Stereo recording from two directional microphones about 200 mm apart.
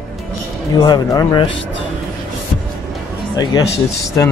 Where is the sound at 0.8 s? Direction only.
20° left (ahead or behind).